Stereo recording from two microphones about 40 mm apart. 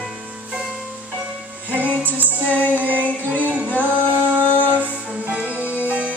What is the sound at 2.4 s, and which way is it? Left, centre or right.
Music, left.